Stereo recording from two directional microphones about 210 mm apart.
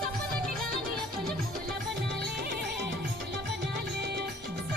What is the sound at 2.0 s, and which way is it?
Music, 50° right (ahead or behind).